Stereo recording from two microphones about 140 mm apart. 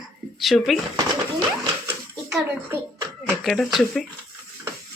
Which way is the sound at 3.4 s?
Centre (ahead or behind).